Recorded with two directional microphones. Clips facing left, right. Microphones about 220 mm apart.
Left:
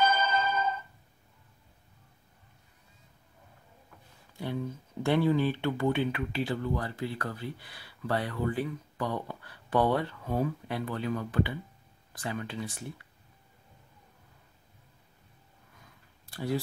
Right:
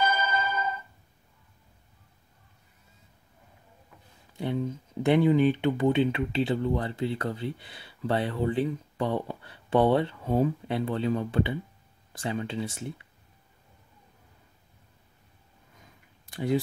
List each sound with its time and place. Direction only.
0.0 s music: 10° right (ahead or behind)
4.4 s speech: 20° right (ahead or behind)
15.8 s a sound: 20° right (ahead or behind)